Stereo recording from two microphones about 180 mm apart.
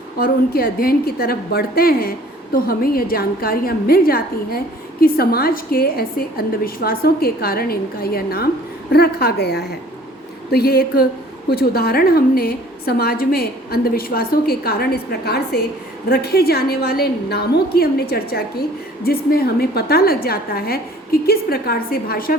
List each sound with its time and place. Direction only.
0.2 s a woman's voice: 55° left (ahead or behind)